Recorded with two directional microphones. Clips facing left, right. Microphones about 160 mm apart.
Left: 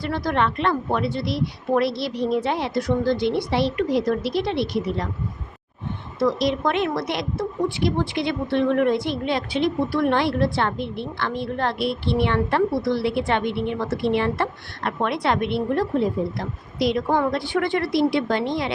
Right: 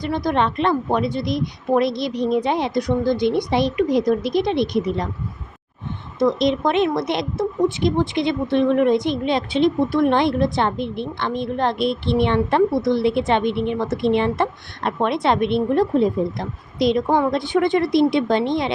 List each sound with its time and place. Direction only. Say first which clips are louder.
0.0 s a woman's voice: right 2 dB; 15° right (ahead or behind)
6.1 s a woman's voice: right 3 dB; 20° right (ahead or behind)